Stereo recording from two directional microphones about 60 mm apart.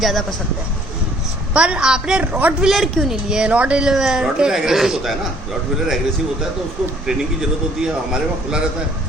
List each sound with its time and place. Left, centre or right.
0.0 s speech: centre
1.5 s speech: centre
2.2 s speech: right
2.7 s speech: centre
7.8 s speech: centre